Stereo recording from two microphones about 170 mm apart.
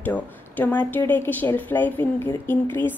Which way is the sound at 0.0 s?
10° left (ahead or behind).